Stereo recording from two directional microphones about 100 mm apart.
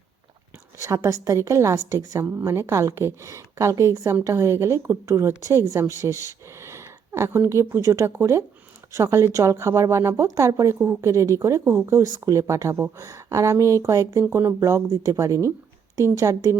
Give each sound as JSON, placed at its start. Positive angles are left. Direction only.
{"t": 0.8, "sound": "a woman's voice", "side_deg": -30}
{"t": 14.3, "sound": "a woman's voice", "side_deg": -20}
{"t": 14.6, "sound": "speech", "side_deg": -30}